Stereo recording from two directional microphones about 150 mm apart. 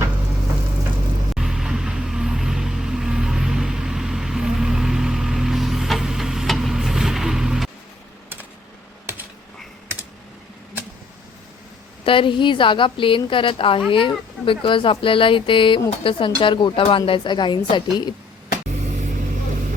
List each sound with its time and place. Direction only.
1.4 s vehicle: 5° right (ahead or behind)
12.0 s speech: 35° left (ahead or behind)
18.7 s vehicle: 55° right (ahead or behind)